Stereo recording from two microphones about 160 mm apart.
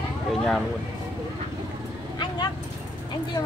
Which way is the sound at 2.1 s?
30° left (ahead or behind).